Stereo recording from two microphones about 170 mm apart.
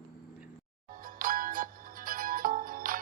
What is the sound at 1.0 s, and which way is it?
Music, 55° right (ahead or behind).